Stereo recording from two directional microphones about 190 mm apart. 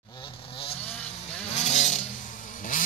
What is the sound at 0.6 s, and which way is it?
Vehicle, 30° left (ahead or behind).